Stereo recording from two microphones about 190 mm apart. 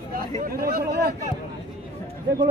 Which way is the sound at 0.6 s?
55° right (ahead or behind).